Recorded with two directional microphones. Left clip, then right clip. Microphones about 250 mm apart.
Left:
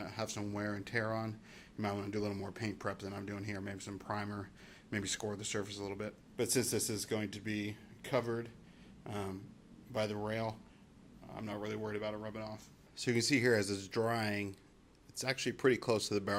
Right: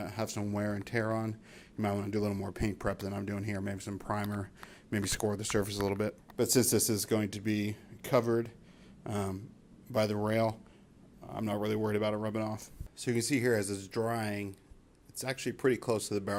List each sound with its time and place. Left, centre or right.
0.0 s speech: right
6.3 s speech: right
6.6 s speech: right
11.3 s speech: right
13.0 s speech: centre